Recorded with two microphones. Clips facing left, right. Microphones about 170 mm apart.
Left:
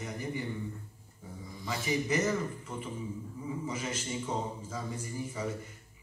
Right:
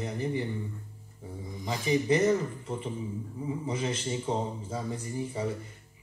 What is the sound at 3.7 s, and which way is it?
A man's voice, 30° right (ahead or behind).